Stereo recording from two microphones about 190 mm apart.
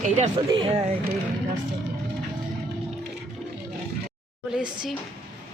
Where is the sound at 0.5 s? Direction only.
25° right (ahead or behind).